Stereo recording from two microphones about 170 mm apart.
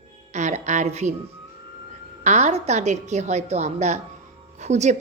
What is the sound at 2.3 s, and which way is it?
A woman's voice, 40° right (ahead or behind).